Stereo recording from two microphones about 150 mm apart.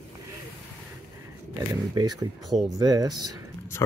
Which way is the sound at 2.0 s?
25° right (ahead or behind).